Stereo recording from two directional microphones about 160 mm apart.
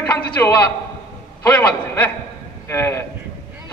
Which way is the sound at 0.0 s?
10° left (ahead or behind).